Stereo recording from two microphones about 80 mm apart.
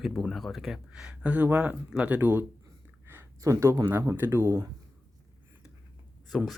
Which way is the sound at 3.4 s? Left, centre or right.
Right.